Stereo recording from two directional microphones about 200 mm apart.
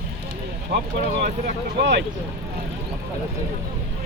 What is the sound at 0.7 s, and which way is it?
Speech, 55° right (ahead or behind).